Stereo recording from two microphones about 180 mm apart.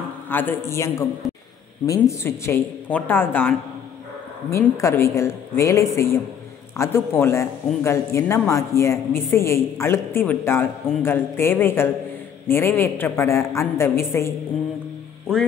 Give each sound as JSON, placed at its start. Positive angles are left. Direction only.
{"t": 0.3, "sound": "a man's voice", "side_deg": 10}
{"t": 1.2, "sound": "a sound", "side_deg": 0}
{"t": 1.9, "sound": "a man's voice", "side_deg": 15}